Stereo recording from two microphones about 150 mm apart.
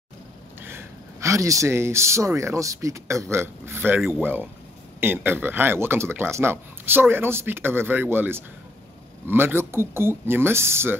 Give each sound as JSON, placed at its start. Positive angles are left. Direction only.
{"t": 0.6, "sound": "speech", "side_deg": -15}